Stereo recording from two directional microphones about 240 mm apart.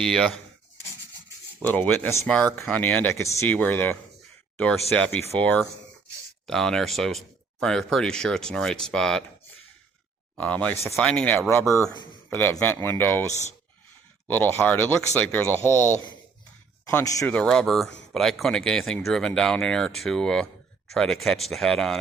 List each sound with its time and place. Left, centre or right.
0.0 s speech: centre
1.6 s speech: centre
10.3 s speech: centre